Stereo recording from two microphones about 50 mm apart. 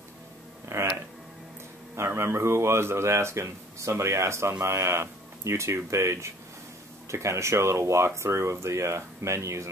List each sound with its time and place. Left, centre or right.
0.7 s speech: right
2.0 s speech: right